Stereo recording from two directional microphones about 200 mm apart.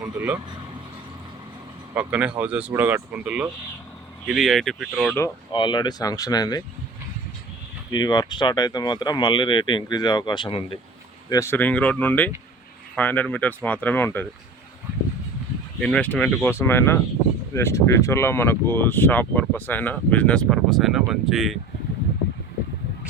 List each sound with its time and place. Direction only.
0.0 s speech: 10° right (ahead or behind)
2.0 s speech: 5° right (ahead or behind)
5.1 s speech: 20° left (ahead or behind)
7.9 s speech: 20° left (ahead or behind)
11.3 s speech: 15° left (ahead or behind)
15.8 s speech: 5° left (ahead or behind)